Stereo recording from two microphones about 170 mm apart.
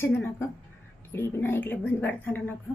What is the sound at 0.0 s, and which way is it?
A woman's voice, 15° left (ahead or behind).